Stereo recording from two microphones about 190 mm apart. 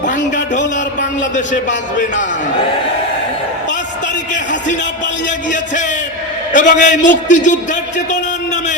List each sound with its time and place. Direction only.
6.5 s a man's voice: 40° left (ahead or behind)